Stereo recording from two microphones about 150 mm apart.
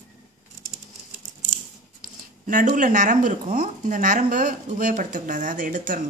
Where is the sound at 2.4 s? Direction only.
60° right (ahead or behind).